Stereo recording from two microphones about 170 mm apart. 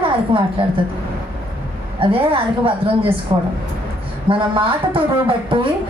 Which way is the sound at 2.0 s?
30° right (ahead or behind).